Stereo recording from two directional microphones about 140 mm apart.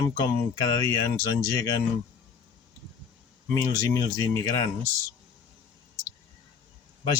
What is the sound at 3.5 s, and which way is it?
Speech, 25° left (ahead or behind).